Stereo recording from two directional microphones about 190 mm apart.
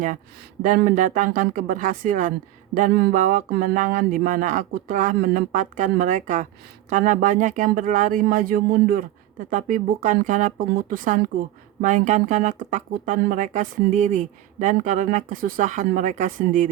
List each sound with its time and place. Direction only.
0.6 s speech: 45° right (ahead or behind)